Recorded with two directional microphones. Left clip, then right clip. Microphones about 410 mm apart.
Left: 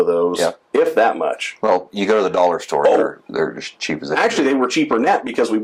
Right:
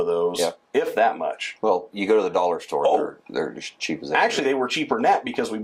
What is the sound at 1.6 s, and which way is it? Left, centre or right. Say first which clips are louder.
Speech: left 5 dB; left.